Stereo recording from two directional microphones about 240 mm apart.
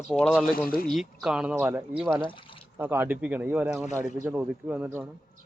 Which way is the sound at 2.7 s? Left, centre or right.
Centre.